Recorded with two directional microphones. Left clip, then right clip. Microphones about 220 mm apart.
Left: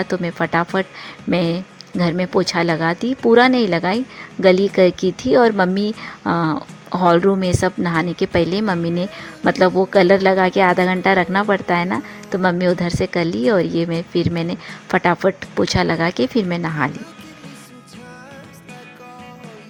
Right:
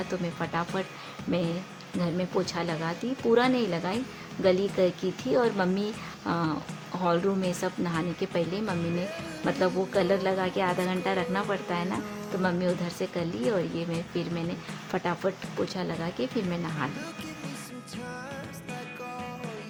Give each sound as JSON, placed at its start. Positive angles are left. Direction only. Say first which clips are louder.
{"t": 0.0, "sound": "speech", "louder": "left 11 dB", "side_deg": 35}